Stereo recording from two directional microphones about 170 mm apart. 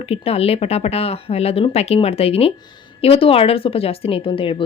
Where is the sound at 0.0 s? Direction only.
35° left (ahead or behind).